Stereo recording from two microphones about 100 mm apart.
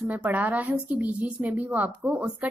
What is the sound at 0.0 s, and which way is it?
A woman's voice, 15° right (ahead or behind).